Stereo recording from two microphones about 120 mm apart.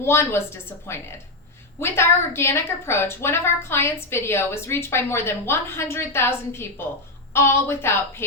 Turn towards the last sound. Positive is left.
turn(degrees=20)  # may be behind; listen again after turning